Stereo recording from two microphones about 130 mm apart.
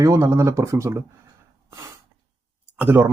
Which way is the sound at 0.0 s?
20° right (ahead or behind).